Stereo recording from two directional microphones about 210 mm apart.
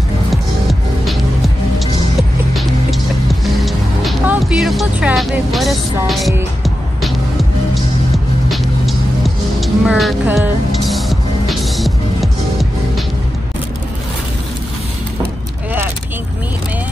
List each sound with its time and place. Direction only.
0.3 s music: centre (ahead or behind)
2.5 s music: centre (ahead or behind)